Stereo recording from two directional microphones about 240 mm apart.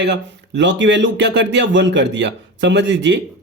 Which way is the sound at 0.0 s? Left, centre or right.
Right.